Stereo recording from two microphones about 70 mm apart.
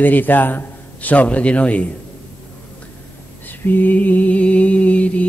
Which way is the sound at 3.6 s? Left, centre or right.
Left.